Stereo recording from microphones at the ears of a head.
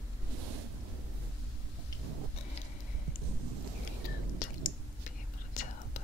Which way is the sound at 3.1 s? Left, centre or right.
Right.